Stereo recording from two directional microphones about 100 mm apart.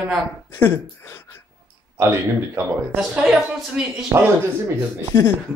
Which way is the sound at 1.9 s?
25° right (ahead or behind).